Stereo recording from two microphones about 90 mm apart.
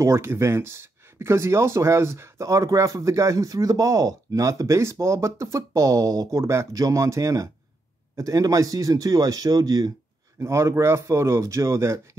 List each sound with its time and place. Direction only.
0.0 s speech: 30° right (ahead or behind)
10.4 s speech: 30° right (ahead or behind)